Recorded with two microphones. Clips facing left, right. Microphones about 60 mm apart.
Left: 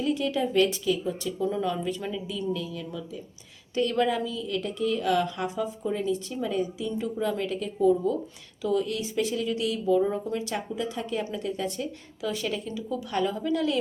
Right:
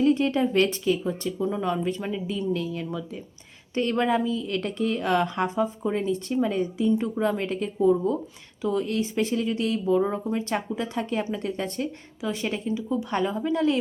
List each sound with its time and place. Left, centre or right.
0.0 s speech: right
1.4 s a woman's voice: centre
1.6 s a woman's voice: right
3.8 s a woman's voice: right
12.2 s a woman's voice: right